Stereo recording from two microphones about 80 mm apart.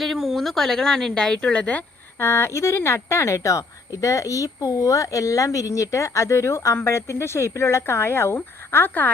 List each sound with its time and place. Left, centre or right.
0.0 s speech: centre
2.1 s speech: left